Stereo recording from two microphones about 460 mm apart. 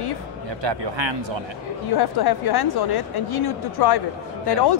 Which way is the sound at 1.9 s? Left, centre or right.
Left.